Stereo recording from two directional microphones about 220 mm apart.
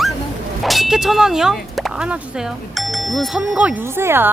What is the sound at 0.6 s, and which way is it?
Speech, centre (ahead or behind).